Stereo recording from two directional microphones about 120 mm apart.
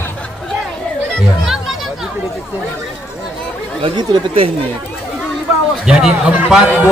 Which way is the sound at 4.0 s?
50° right (ahead or behind).